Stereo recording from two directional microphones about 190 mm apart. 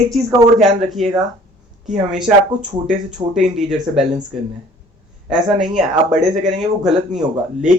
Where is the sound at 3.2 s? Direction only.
25° right (ahead or behind).